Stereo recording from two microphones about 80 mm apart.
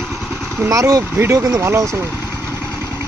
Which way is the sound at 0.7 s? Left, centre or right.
Right.